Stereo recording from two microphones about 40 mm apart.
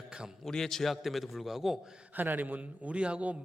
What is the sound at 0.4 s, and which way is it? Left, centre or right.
Speech, centre.